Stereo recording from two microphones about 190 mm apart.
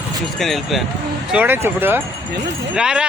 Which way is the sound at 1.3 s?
10° right (ahead or behind).